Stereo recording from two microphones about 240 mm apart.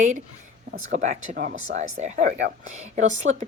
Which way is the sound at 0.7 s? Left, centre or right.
Right.